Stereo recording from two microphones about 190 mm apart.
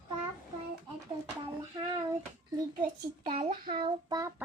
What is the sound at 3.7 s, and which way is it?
Speech, 25° right (ahead or behind).